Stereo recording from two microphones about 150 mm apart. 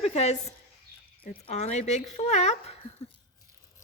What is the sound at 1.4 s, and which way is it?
Speech, 50° left (ahead or behind).